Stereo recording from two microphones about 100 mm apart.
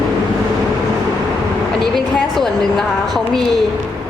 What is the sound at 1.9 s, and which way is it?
A woman's voice, 5° left (ahead or behind).